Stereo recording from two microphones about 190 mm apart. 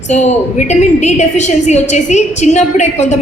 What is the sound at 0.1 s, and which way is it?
A woman's voice, 35° left (ahead or behind).